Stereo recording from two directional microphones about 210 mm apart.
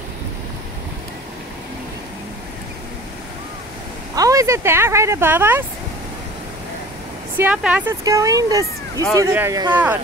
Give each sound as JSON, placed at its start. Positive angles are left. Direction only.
{"t": 4.1, "sound": "speech", "side_deg": -15}
{"t": 7.3, "sound": "speech", "side_deg": -5}